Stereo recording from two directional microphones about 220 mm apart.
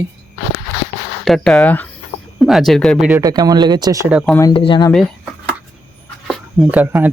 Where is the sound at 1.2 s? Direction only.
Centre (ahead or behind).